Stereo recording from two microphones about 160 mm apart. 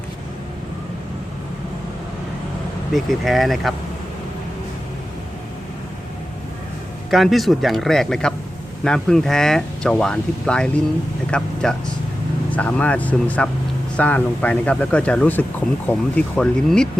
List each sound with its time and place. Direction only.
2.9 s speech: centre (ahead or behind)
7.1 s speech: centre (ahead or behind)